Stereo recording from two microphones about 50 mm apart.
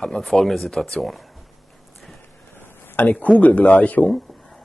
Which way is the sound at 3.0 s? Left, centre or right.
Left.